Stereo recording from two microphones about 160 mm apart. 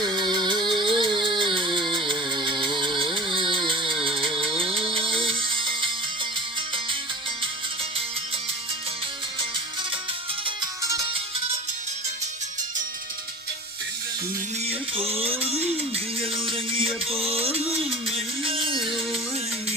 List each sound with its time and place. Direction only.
0.0 s music: 25° right (ahead or behind)
10.4 s music: 25° right (ahead or behind)
14.6 s music: 40° right (ahead or behind)